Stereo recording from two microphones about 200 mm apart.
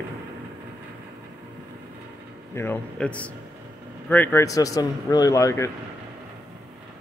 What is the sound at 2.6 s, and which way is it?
Speech, 10° left (ahead or behind).